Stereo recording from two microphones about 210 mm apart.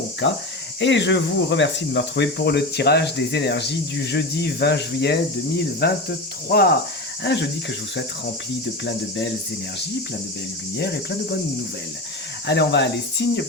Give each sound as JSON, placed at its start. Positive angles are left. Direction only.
{"t": 0.8, "sound": "speech", "side_deg": 60}
{"t": 10.8, "sound": "speech", "side_deg": 50}
{"t": 12.5, "sound": "speech", "side_deg": 55}